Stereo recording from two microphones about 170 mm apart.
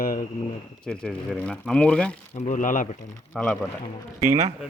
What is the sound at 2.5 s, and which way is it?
Speech, 50° left (ahead or behind).